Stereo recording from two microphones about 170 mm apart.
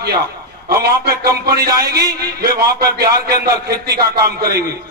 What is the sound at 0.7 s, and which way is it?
Music, 65° right (ahead or behind).